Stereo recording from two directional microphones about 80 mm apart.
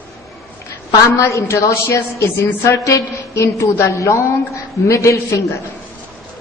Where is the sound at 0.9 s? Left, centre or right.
Left.